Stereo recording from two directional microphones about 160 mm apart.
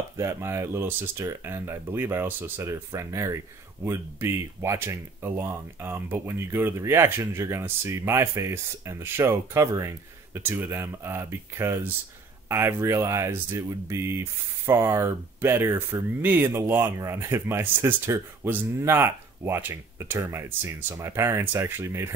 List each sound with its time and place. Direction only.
0.2 s speech: 15° right (ahead or behind)